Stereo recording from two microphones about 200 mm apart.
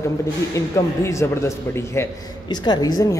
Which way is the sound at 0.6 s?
15° left (ahead or behind).